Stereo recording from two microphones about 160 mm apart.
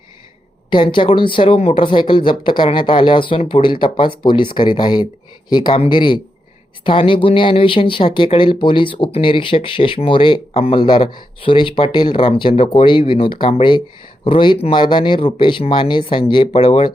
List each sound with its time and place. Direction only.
0.7 s speech: 30° left (ahead or behind)